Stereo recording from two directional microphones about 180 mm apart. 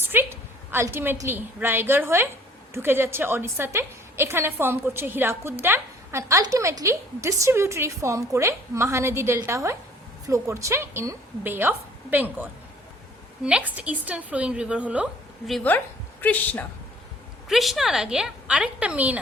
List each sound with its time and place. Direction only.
0.0 s a woman's voice: 10° right (ahead or behind)